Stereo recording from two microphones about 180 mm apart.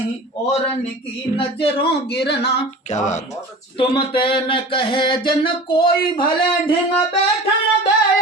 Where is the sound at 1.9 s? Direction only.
65° left (ahead or behind).